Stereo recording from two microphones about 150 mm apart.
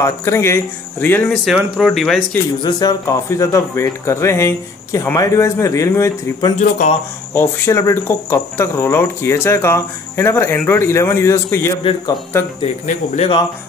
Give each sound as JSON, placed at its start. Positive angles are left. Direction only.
{"t": 0.0, "sound": "speech", "side_deg": 20}
{"t": 1.3, "sound": "speech", "side_deg": 0}
{"t": 2.6, "sound": "speech", "side_deg": 25}
{"t": 6.8, "sound": "speech", "side_deg": 55}
{"t": 7.3, "sound": "speech", "side_deg": 20}
{"t": 12.8, "sound": "speech", "side_deg": 50}